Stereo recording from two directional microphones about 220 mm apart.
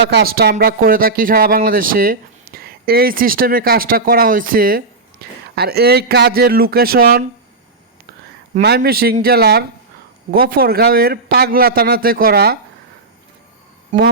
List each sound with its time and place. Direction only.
0.1 s a man's voice: 45° right (ahead or behind)
8.6 s a man's voice: 45° right (ahead or behind)